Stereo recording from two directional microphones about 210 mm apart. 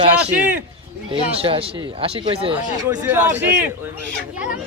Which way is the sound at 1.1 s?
25° right (ahead or behind).